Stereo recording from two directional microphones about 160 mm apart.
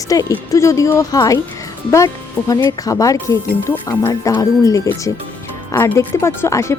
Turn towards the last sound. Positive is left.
turn(degrees=15)  # may be behind; listen again after turning